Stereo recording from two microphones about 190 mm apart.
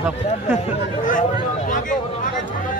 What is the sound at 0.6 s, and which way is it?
Speech, 40° left (ahead or behind).